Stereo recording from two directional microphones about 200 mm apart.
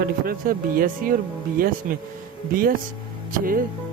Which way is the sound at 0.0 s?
45° right (ahead or behind).